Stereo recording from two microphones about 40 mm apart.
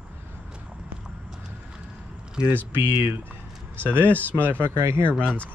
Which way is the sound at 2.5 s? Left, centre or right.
Right.